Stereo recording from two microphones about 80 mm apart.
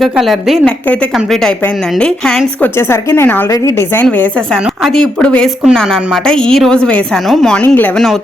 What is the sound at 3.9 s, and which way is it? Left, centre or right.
Speech, left.